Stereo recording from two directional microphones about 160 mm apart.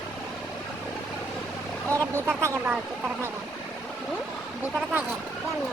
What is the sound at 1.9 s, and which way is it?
Speech, 15° right (ahead or behind).